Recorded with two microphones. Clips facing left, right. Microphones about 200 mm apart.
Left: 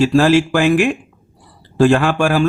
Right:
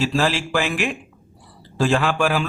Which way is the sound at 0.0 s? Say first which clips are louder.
Left 9 dB; 50° left (ahead or behind).